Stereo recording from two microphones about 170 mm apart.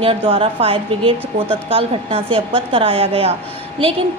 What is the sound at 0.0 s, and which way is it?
A woman's voice, 35° right (ahead or behind).